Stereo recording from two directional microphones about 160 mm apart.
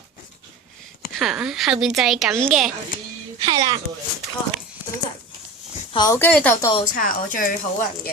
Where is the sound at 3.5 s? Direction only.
25° right (ahead or behind).